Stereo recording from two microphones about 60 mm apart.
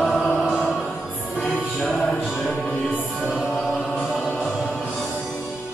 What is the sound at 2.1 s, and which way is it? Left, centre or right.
Music, centre.